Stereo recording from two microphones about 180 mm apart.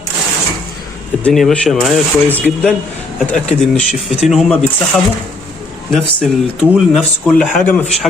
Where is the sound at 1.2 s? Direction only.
5° left (ahead or behind).